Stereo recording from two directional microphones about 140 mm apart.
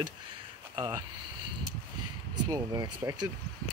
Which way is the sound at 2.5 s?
25° right (ahead or behind).